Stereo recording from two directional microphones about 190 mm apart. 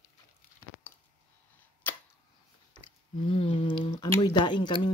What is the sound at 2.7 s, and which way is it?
Speech, 30° left (ahead or behind).